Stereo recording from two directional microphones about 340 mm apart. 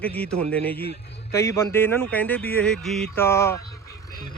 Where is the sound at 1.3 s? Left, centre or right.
Centre.